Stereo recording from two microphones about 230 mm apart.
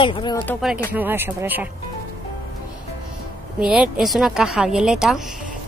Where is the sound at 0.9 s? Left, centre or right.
Centre.